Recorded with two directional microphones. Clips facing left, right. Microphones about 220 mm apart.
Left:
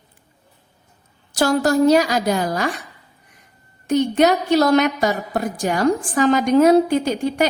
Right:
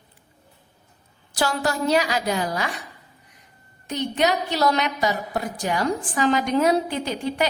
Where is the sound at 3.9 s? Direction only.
50° left (ahead or behind).